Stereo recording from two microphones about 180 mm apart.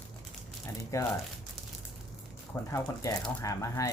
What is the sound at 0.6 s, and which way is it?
Speech, 15° left (ahead or behind).